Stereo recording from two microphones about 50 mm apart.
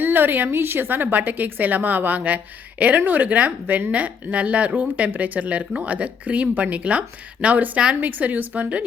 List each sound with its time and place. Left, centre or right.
0.0 s a woman's voice: right